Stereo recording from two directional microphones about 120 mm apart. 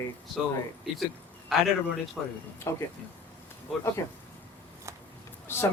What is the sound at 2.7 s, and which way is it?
Speech, 25° left (ahead or behind).